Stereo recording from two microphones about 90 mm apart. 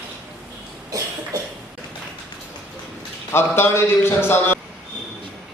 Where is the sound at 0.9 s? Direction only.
40° right (ahead or behind).